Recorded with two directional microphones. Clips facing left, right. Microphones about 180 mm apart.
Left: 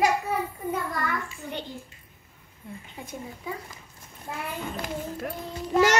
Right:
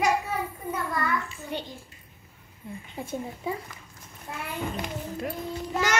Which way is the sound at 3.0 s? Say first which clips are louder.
Right 6 dB; 30° right (ahead or behind).